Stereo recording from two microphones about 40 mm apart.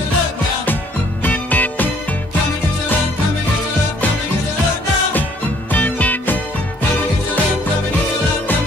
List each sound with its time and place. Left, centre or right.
1.2 s music: left
5.7 s music: left